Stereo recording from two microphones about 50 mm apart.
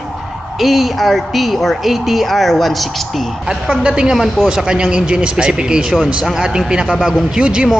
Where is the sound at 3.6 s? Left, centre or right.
Centre.